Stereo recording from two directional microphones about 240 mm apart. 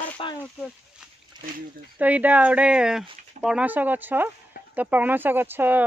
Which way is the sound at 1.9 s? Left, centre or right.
Centre.